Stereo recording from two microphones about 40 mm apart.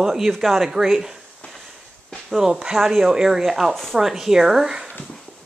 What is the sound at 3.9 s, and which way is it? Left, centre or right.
Speech, centre.